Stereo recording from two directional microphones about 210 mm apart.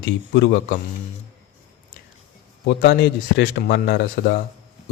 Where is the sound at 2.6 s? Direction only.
55° left (ahead or behind).